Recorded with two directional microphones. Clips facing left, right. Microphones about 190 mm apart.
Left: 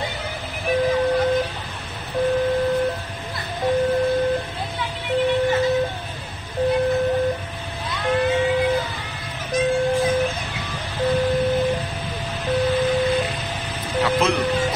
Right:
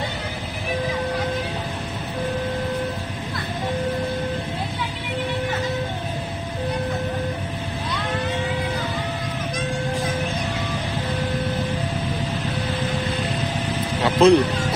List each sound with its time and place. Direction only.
14.0 s music: 30° right (ahead or behind)